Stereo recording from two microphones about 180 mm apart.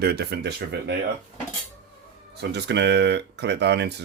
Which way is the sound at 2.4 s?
70° right (ahead or behind).